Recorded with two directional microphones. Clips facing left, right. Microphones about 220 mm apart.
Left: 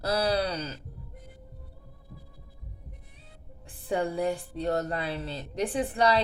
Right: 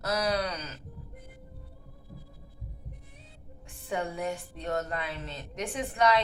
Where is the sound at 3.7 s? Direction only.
35° left (ahead or behind).